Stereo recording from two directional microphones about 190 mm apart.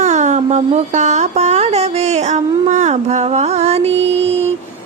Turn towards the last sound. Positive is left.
turn(degrees=-35)  # may be behind; listen again after turning